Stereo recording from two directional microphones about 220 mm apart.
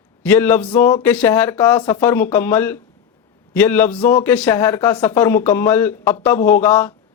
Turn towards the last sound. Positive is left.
turn(degrees=10)  # may be behind; listen again after turning